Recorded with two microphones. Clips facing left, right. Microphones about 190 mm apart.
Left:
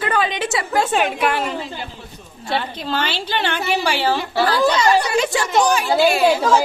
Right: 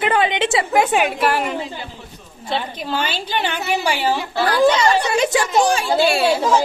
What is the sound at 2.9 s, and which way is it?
A woman's voice, 10° right (ahead or behind).